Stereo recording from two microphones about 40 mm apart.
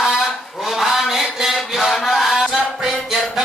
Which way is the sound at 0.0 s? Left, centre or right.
Centre.